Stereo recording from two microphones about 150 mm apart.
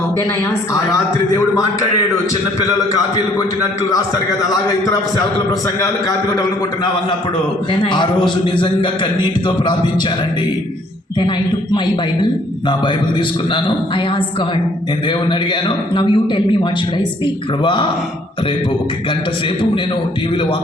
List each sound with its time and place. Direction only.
2.7 s a man's voice: 20° left (ahead or behind)
5.5 s a man's voice: 25° left (ahead or behind)
7.7 s a man's voice: 30° left (ahead or behind)
11.2 s a man's voice: 30° left (ahead or behind)
17.6 s a man's voice: 30° left (ahead or behind)